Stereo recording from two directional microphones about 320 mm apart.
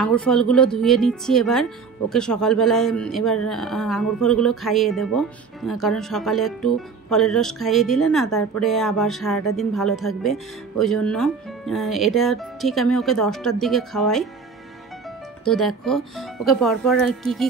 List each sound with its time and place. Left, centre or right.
0.0 s speech: centre
15.4 s speech: centre